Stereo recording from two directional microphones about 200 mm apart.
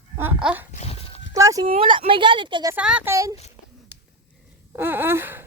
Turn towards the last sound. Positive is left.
turn(degrees=-10)  # may be behind; listen again after turning